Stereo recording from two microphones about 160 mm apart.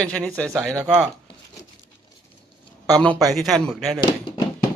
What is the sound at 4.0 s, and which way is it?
Speech, 30° left (ahead or behind).